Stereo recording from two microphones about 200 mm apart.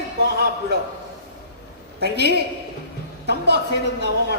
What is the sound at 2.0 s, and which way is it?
A woman's voice, 55° right (ahead or behind).